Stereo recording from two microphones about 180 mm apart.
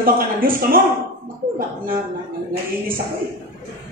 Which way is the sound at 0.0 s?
55° right (ahead or behind).